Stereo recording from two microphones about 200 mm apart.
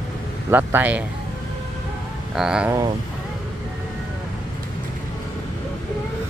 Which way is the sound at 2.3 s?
5° right (ahead or behind).